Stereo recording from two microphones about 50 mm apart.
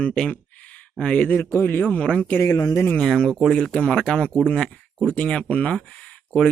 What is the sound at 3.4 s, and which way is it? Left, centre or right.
Speech, centre.